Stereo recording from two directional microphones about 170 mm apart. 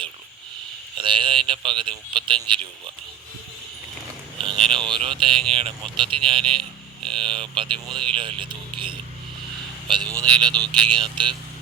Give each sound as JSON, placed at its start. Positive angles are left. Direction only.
{"t": 0.9, "sound": "a man's voice", "side_deg": -30}
{"t": 4.4, "sound": "a man's voice", "side_deg": -30}
{"t": 7.9, "sound": "speech", "side_deg": 5}
{"t": 8.1, "sound": "a man's voice", "side_deg": -30}